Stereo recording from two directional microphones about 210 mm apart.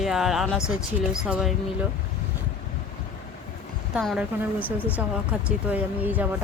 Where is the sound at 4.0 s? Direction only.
5° right (ahead or behind).